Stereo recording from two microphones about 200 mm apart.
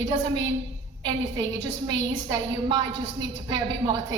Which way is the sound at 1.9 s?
20° right (ahead or behind).